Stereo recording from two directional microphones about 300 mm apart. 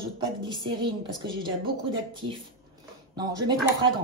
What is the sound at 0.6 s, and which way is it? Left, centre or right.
Speech, centre.